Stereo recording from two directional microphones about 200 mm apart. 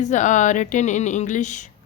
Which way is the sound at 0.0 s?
40° left (ahead or behind).